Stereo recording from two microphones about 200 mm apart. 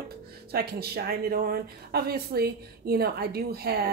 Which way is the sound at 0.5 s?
50° right (ahead or behind).